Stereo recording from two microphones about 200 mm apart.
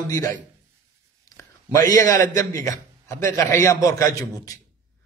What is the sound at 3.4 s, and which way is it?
A man's voice, 15° left (ahead or behind).